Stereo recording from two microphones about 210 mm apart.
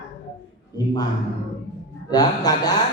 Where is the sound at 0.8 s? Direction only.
20° left (ahead or behind).